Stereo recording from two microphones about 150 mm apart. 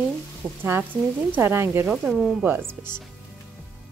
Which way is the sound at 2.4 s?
15° right (ahead or behind).